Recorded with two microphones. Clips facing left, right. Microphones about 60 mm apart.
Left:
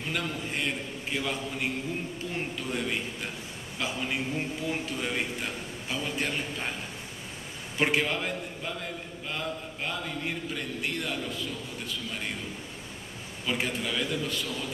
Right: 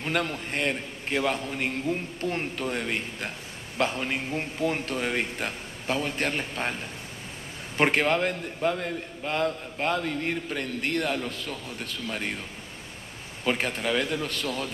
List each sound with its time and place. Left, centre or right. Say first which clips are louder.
0.0 s a man's voice: right 4 dB; right
3.7 s a man's voice: right 7 dB; right
4.0 s speech: right 1 dB; right
4.6 s a man's voice: right 4 dB; right
7.7 s a man's voice: right 4 dB; right
13.5 s a man's voice: right 4 dB; right